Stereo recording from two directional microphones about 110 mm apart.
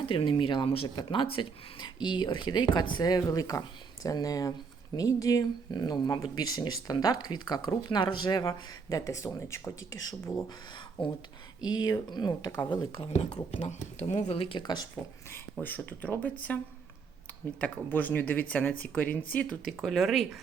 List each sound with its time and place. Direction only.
0.0 s speech: 55° left (ahead or behind); by 10.4 s 30° left (ahead or behind)
11.6 s speech: 40° left (ahead or behind)
13.1 s speech: 85° left; by 14.6 s 60° left (ahead or behind)
14.6 s speech: 40° left (ahead or behind)
15.6 s speech: 15° left (ahead or behind)
17.6 s speech: 15° left (ahead or behind); by 20.4 s centre (ahead or behind)